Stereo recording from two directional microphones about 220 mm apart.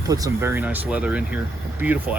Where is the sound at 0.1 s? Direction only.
15° right (ahead or behind).